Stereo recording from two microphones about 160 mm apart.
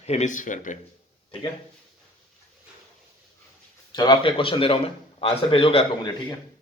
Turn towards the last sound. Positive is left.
turn(degrees=35)  # may be behind; listen again after turning